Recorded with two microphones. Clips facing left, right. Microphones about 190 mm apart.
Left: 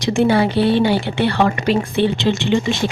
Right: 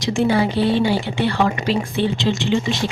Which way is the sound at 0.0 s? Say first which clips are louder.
Left 3 dB; 60° left (ahead or behind).